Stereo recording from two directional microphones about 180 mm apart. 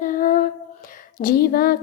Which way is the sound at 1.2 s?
55° left (ahead or behind).